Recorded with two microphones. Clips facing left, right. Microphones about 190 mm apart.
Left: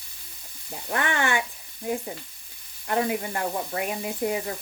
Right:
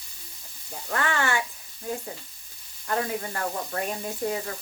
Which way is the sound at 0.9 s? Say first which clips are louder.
Left 1 dB; 20° left (ahead or behind).